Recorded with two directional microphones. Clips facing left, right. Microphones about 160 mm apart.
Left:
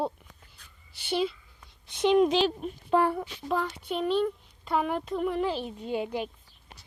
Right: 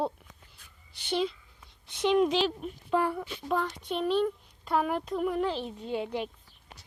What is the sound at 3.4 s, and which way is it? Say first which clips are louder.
Speech: even; centre (ahead or behind).